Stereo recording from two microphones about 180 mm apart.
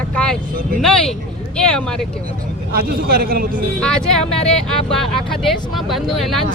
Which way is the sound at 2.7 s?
55° right (ahead or behind).